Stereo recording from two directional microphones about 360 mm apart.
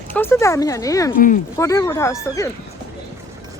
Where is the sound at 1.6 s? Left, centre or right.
Centre.